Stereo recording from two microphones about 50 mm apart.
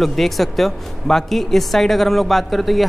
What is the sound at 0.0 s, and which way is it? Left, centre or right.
Speech, centre.